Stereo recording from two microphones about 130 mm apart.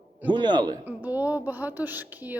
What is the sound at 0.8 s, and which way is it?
Speech, 15° right (ahead or behind).